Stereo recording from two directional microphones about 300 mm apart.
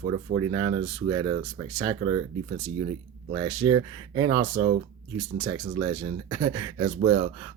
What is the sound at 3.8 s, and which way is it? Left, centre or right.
Speech, right.